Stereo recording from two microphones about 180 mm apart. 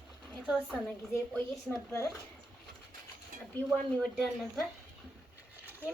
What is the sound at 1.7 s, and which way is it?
Speech, 15° left (ahead or behind).